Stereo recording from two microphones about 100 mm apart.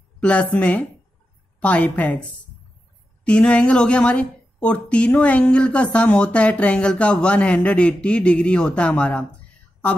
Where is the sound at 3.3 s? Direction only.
10° left (ahead or behind).